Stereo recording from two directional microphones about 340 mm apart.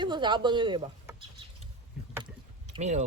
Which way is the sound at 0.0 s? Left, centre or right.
Centre.